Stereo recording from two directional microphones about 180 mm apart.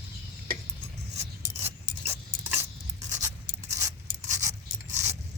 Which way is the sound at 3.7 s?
15° right (ahead or behind).